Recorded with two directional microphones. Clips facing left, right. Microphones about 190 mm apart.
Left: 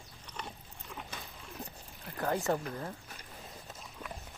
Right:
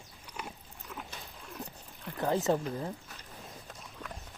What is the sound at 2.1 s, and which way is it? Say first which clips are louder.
Speech: right 3 dB; 20° right (ahead or behind).